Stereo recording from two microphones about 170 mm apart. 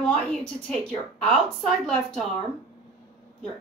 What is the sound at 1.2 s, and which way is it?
A woman's voice, 5° left (ahead or behind).